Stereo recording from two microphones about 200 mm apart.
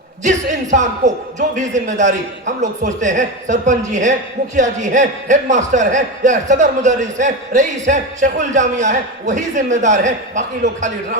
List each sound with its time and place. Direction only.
0.3 s a man's voice: 35° right (ahead or behind)